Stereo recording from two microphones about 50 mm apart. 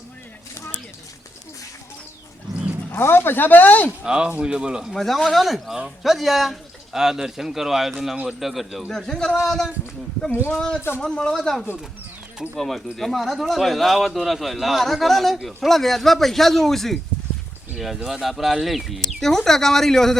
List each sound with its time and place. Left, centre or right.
2.9 s speech: left
4.0 s speech: centre
4.9 s speech: centre
8.9 s a man's voice: centre
12.5 s speech: centre